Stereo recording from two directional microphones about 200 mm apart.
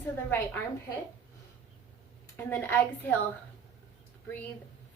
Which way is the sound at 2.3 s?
10° left (ahead or behind).